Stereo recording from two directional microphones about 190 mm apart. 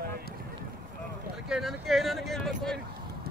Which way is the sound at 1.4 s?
Centre (ahead or behind).